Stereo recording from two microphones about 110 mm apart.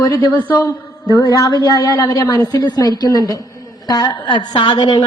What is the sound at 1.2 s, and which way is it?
A woman's voice, 30° left (ahead or behind).